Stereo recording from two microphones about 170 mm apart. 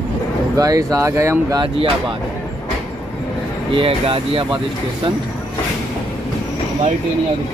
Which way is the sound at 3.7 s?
35° right (ahead or behind).